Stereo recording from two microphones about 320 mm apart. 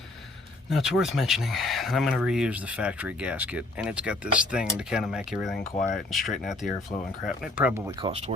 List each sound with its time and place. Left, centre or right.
0.7 s speech: centre
5.5 s speech: left
6.1 s speech: centre